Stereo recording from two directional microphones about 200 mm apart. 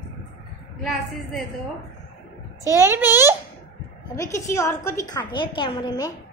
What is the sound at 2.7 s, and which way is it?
Speech, 10° right (ahead or behind).